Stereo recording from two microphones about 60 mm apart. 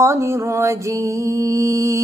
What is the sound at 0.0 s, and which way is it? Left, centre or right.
Mantra, right.